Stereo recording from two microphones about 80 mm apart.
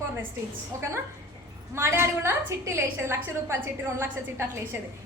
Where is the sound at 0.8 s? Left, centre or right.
Right.